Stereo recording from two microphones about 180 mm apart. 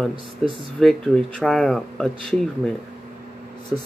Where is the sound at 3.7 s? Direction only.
5° right (ahead or behind).